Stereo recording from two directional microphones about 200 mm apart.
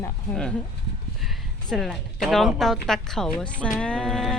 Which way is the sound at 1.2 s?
Centre (ahead or behind).